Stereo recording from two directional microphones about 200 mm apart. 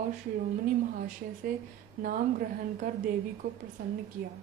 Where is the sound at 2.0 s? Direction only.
45° right (ahead or behind).